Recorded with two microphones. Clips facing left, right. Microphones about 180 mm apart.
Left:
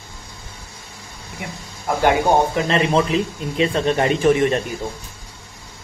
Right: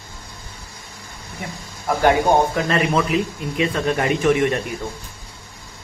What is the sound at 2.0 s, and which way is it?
Speech, 20° left (ahead or behind).